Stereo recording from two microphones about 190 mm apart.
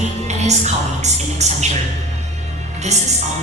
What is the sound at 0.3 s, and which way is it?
Music, 35° right (ahead or behind).